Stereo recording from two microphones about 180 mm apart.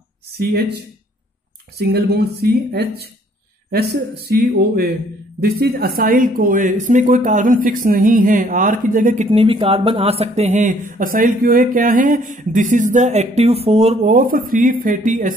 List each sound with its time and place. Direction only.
0.4 s speech: 60° right (ahead or behind)
1.8 s speech: 65° right (ahead or behind); by 9.3 s 45° right (ahead or behind)
9.3 s speech: 30° right (ahead or behind)
14.1 s speech: 50° right (ahead or behind)